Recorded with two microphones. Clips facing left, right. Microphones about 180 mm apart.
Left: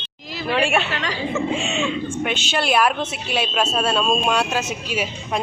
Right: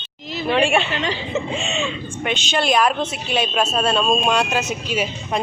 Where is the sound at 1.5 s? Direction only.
10° left (ahead or behind).